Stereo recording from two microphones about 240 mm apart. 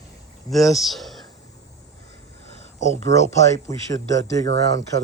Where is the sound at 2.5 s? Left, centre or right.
Left.